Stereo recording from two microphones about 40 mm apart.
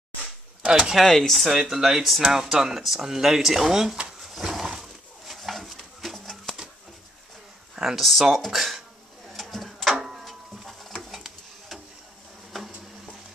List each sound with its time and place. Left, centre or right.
0.7 s speech: centre
1.0 s speech: centre
1.5 s speech: centre
2.3 s speech: centre
4.3 s a sound: centre
6.5 s pigeon: centre
7.7 s speech: centre
9.3 s a sound: centre
9.9 s a sound: centre